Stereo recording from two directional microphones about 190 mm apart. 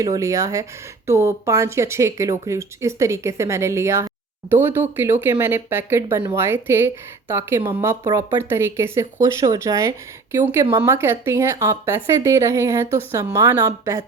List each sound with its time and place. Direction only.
0.0 s speech: 15° right (ahead or behind)